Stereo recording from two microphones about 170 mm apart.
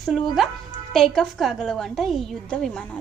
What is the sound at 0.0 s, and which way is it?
A woman's voice, centre (ahead or behind).